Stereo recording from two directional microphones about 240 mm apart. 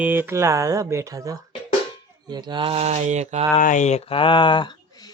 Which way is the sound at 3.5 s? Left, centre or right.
Left.